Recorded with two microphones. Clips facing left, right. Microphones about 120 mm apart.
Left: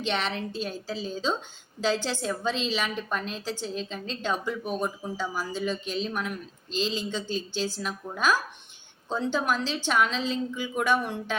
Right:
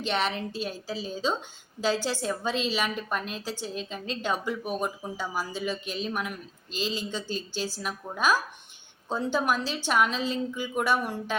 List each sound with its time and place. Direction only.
0.0 s a woman's voice: 5° right (ahead or behind)
7.2 s speech: 45° right (ahead or behind)
7.6 s a woman's voice: 10° right (ahead or behind)